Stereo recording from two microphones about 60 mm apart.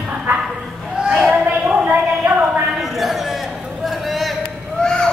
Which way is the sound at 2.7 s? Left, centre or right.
Centre.